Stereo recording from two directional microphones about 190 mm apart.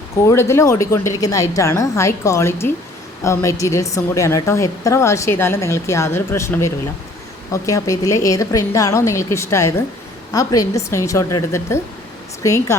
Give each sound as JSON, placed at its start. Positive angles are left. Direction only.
{"t": 0.3, "sound": "a woman's voice", "side_deg": 15}